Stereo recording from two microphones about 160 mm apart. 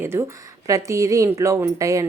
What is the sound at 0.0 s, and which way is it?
A woman's voice, 15° right (ahead or behind).